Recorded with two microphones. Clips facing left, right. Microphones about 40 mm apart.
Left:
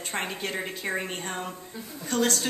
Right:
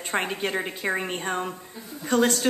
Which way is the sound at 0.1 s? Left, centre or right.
Right.